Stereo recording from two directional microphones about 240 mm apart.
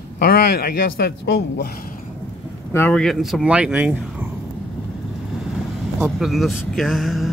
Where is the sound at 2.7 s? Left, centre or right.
Centre.